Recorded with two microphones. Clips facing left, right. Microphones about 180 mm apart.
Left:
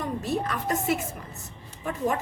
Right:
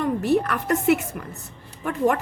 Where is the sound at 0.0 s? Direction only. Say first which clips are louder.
Right 7 dB; 65° right (ahead or behind).